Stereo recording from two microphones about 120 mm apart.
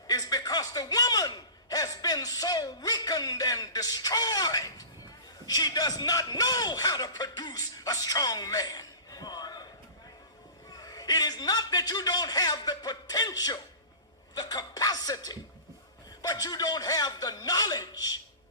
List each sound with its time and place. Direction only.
0.1 s a sound: 30° left (ahead or behind)
5.5 s a man's voice: 35° left (ahead or behind)
10.8 s a man's voice: 30° left (ahead or behind)